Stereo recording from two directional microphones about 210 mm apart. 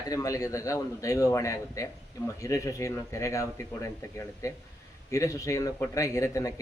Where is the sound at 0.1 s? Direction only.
15° left (ahead or behind).